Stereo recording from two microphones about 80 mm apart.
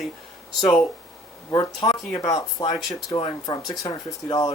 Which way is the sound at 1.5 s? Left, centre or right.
Left.